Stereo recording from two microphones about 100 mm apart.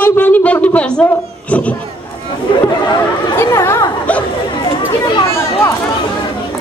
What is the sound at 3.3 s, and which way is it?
Speech, 25° left (ahead or behind).